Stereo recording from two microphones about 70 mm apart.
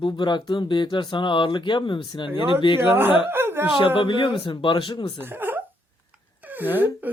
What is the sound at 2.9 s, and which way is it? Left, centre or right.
Speech, right.